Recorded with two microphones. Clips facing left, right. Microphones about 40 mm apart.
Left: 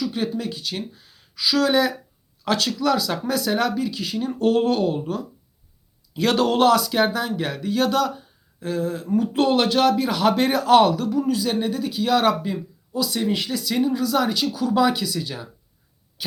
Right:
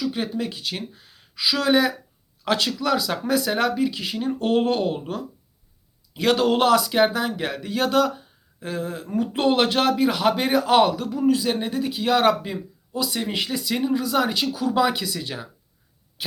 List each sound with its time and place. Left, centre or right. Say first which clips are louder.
0.0 s speech: left 1 dB; centre
6.3 s a man's voice: left 1 dB; centre; by 9.9 s right
9.9 s a man's voice: even; centre